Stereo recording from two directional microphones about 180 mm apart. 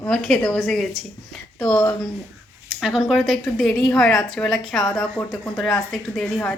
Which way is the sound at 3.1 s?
Centre (ahead or behind).